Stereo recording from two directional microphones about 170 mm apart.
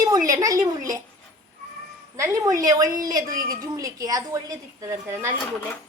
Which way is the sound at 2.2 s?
20° right (ahead or behind).